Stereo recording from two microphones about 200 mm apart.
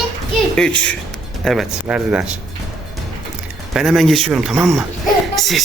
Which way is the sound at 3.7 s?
Centre (ahead or behind).